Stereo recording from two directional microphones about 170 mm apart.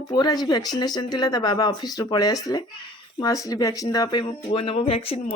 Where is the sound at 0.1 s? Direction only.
25° left (ahead or behind).